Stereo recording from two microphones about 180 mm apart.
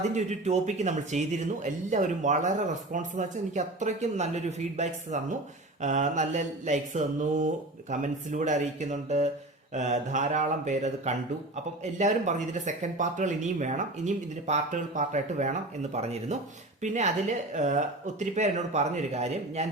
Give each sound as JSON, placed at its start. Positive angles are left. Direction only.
{"t": 0.1, "sound": "speech", "side_deg": -40}